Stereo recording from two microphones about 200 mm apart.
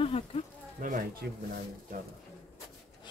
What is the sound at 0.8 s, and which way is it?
Speech, 40° right (ahead or behind).